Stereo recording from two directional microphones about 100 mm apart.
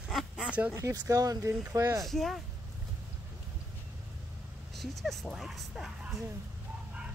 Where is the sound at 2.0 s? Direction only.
Centre (ahead or behind).